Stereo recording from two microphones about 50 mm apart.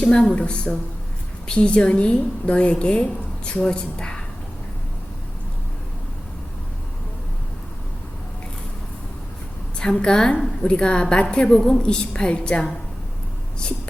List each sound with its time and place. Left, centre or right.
0.0 s a woman's voice: centre
9.7 s a woman's voice: centre